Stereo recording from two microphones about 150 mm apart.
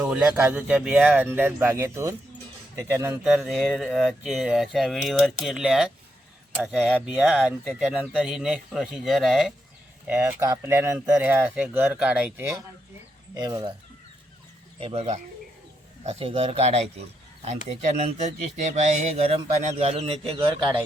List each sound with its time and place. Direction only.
0.0 s speech: 10° right (ahead or behind)
3.2 s speech: centre (ahead or behind)
7.0 s speech: 10° right (ahead or behind)
10.1 s speech: 10° right (ahead or behind)
13.3 s speech: 25° right (ahead or behind)
14.8 s speech: 40° right (ahead or behind)
20.3 s speech: 30° right (ahead or behind)